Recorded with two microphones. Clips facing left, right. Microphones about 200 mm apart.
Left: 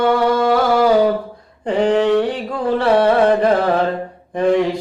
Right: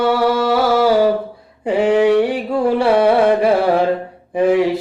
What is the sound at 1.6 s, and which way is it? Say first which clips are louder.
Carnatic music: right 2 dB; 10° right (ahead or behind).